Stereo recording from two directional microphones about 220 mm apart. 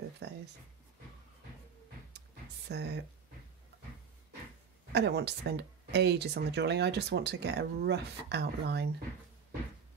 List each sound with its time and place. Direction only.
0.2 s speech: 50° right (ahead or behind)
2.7 s speech: 50° right (ahead or behind)
4.9 s speech: 50° right (ahead or behind)